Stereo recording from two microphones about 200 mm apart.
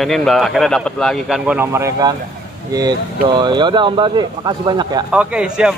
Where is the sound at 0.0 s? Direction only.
Centre (ahead or behind); by 2.1 s 15° right (ahead or behind).